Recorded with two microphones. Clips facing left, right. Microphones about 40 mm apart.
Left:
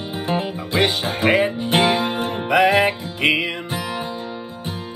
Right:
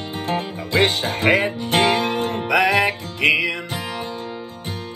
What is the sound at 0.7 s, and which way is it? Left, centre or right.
Music, right.